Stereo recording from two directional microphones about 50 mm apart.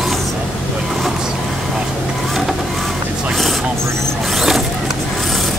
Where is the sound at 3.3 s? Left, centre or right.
Centre.